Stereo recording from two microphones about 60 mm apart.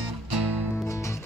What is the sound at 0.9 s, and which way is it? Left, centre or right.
Music, left.